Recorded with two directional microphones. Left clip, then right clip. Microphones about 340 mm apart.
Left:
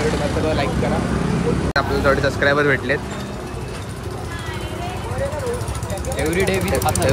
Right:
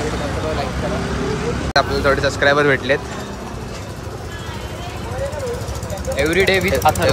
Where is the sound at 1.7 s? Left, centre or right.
Centre.